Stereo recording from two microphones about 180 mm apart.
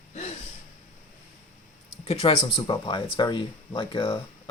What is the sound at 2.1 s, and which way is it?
Speech, 35° left (ahead or behind).